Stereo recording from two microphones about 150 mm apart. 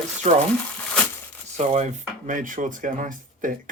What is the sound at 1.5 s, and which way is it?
Speech, 50° right (ahead or behind).